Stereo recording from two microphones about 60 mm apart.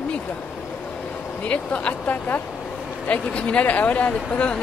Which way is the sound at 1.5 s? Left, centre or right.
Left.